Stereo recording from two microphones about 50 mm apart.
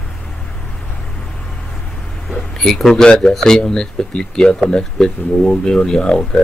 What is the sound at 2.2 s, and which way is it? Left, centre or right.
A man's voice, centre.